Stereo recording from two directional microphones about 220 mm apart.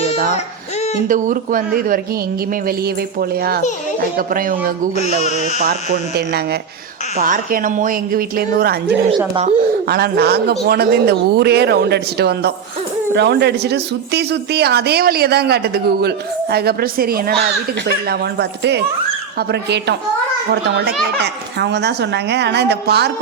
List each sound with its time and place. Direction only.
1.0 s speech: 35° right (ahead or behind)
9.0 s speech: 25° right (ahead or behind)
9.9 s speech: 45° right (ahead or behind)